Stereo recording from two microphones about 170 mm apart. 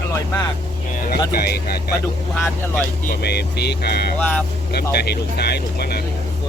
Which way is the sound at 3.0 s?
65° left (ahead or behind).